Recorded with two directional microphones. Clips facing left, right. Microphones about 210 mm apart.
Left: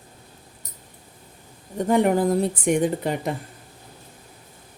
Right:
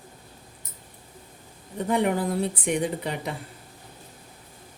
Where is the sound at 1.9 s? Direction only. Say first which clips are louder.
Left 5 dB; 45° left (ahead or behind).